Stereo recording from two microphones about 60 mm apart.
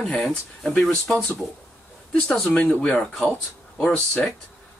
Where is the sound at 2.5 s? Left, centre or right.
Centre.